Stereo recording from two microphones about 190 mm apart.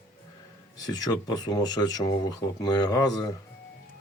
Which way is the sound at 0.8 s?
20° left (ahead or behind).